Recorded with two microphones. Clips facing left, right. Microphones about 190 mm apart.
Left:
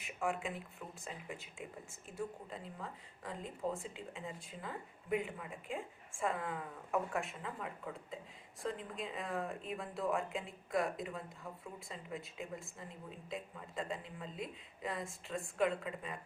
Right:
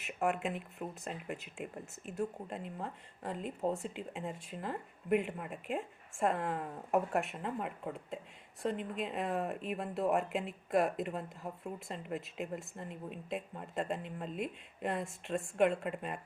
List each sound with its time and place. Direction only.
0.0 s speech: 65° right (ahead or behind)